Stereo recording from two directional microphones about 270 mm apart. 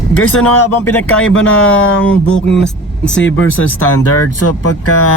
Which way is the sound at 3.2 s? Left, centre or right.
Left.